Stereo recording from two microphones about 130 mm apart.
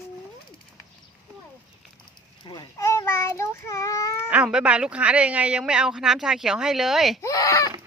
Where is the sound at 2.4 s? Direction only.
35° left (ahead or behind).